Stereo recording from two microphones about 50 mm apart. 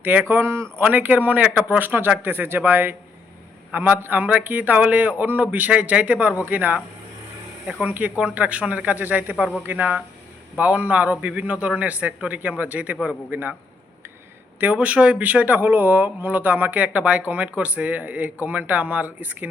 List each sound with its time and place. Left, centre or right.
0.0 s a man's voice: right
0.4 s speech: right
0.8 s a man's voice: right
7.9 s a man's voice: right
10.6 s a man's voice: right
14.6 s a man's voice: right
16.8 s a man's voice: right